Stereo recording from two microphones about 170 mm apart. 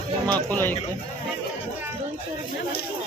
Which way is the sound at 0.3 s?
10° left (ahead or behind).